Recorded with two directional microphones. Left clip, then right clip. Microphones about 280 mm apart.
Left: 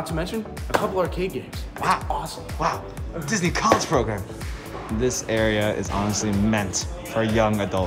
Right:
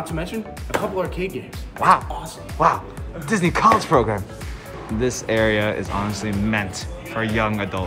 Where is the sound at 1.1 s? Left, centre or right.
Left.